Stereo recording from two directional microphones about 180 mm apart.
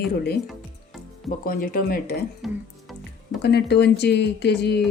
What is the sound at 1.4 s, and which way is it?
Speech, 50° left (ahead or behind).